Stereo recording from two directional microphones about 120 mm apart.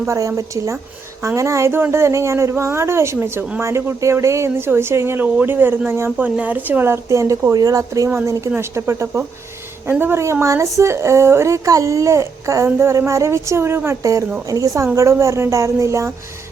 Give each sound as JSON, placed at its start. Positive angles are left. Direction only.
{"t": 0.1, "sound": "speech", "side_deg": -25}